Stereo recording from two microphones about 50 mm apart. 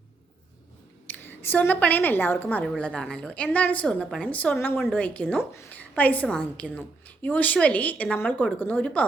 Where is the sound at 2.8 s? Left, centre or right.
Centre.